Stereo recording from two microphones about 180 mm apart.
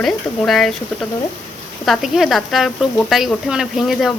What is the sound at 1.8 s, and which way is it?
Speech, centre (ahead or behind).